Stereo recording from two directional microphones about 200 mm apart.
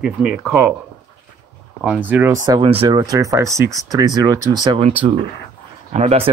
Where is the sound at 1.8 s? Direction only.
10° right (ahead or behind).